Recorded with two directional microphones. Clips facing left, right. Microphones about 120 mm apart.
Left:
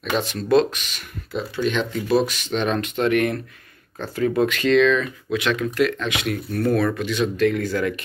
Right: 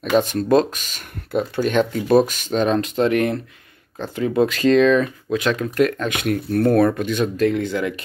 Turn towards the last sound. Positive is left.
turn(degrees=-20)  # may be behind; listen again after turning